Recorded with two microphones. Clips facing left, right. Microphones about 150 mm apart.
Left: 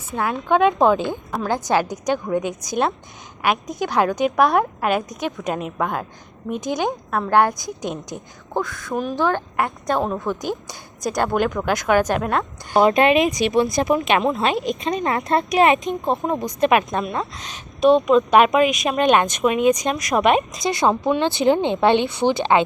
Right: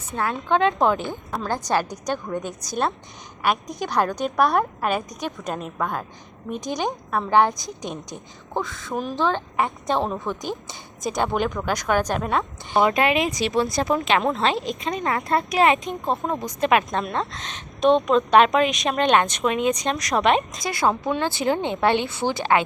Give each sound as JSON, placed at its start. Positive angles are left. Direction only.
{"t": 0.1, "sound": "speech", "side_deg": 10}
{"t": 4.0, "sound": "a woman's voice", "side_deg": 5}
{"t": 8.9, "sound": "a woman's voice", "side_deg": 0}
{"t": 12.8, "sound": "speech", "side_deg": 25}
{"t": 17.0, "sound": "speech", "side_deg": 5}
{"t": 20.7, "sound": "speech", "side_deg": 20}